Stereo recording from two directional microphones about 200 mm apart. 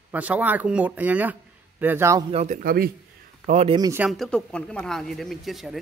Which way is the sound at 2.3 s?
35° right (ahead or behind).